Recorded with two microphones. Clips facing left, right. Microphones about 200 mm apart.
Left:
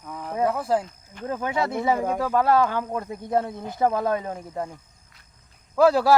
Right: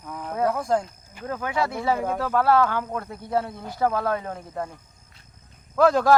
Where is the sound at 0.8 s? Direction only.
10° right (ahead or behind).